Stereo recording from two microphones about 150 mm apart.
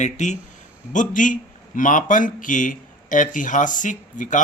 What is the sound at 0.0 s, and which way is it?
A man's voice, 55° left (ahead or behind).